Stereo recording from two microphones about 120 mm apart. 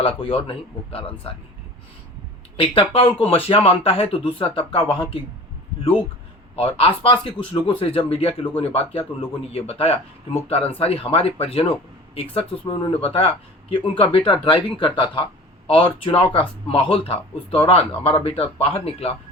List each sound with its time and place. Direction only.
0.0 s speech: 50° left (ahead or behind)
2.6 s speech: 50° left (ahead or behind)
6.6 s speech: 55° left (ahead or behind)
7.0 s speech: 40° left (ahead or behind)